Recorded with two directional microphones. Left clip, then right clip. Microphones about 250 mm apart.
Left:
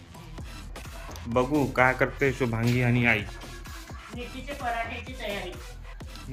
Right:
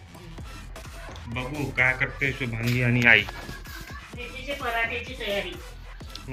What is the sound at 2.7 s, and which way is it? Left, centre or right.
Speech, centre.